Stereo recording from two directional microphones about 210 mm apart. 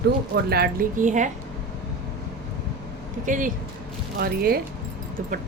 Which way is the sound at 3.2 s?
40° right (ahead or behind).